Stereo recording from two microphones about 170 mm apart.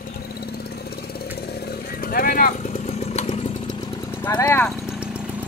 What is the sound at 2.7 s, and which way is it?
Motorcycle, 40° left (ahead or behind).